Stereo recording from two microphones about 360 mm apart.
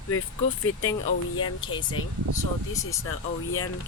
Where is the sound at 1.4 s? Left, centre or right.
Centre.